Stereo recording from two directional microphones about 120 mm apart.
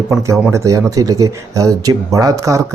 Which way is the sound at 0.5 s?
25° right (ahead or behind).